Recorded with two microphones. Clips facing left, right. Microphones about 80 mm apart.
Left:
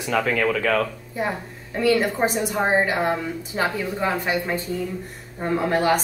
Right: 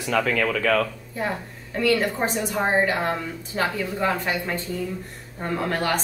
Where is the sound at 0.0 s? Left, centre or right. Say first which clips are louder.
Left 1 dB; left.